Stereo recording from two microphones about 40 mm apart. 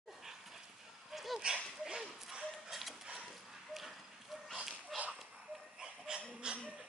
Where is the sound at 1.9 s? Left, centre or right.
Centre.